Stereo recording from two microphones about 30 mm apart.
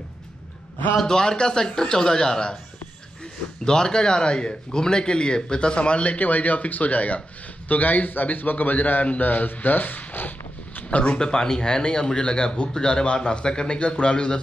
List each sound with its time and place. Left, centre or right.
1.0 s speech: left
3.6 s speech: left
6.1 s speech: left
7.6 s a man's voice: left
10.9 s speech: left
11.1 s speech: left